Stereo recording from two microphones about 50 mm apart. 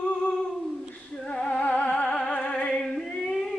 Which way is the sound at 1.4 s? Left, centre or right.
Left.